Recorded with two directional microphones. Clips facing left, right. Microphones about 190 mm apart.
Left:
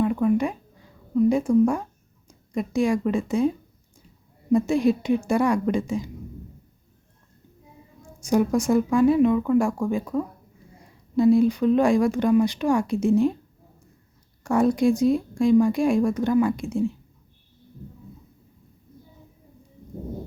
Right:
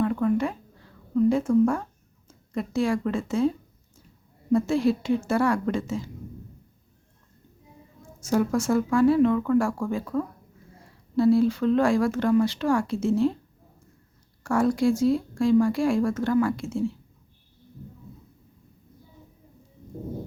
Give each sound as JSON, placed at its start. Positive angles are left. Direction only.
{"t": 0.0, "sound": "a sound", "side_deg": 15}
{"t": 4.5, "sound": "speech", "side_deg": 15}
{"t": 8.0, "sound": "speech", "side_deg": 15}
{"t": 14.4, "sound": "speech", "side_deg": 20}